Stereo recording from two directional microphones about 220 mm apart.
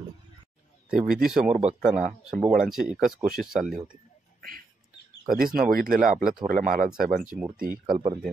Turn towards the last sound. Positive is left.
turn(degrees=-40)  # may be behind; listen again after turning